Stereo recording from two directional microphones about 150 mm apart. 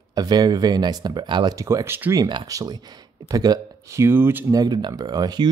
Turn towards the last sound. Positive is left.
turn(degrees=-25)  # may be behind; listen again after turning